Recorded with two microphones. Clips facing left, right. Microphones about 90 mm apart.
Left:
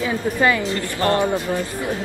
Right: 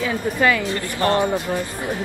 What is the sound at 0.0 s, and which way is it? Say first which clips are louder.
Speech: even; 15° left (ahead or behind).